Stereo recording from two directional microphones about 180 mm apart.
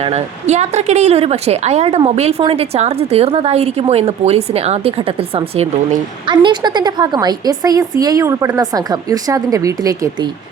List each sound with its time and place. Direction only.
0.0 s speech: 40° right (ahead or behind); by 10.2 s 20° right (ahead or behind)